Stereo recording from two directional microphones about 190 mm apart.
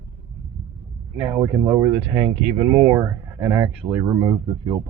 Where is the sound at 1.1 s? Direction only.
10° right (ahead or behind).